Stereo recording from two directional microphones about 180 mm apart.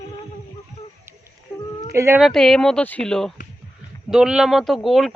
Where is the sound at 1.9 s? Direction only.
15° right (ahead or behind).